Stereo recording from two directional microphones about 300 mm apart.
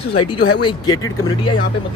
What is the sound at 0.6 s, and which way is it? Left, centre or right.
Speech, centre.